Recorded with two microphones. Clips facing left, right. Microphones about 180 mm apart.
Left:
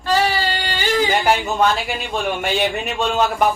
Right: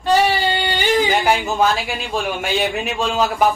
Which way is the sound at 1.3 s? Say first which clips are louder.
Even; centre (ahead or behind).